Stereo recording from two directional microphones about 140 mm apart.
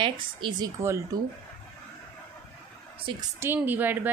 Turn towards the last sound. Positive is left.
turn(degrees=-15)  # may be behind; listen again after turning